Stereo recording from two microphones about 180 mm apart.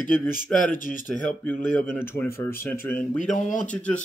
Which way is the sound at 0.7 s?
50° left (ahead or behind).